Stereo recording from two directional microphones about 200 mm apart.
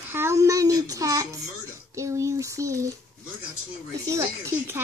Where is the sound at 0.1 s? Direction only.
15° right (ahead or behind).